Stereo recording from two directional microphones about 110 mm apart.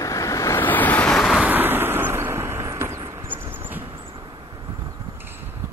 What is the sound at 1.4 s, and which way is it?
Vehicle, 15° right (ahead or behind).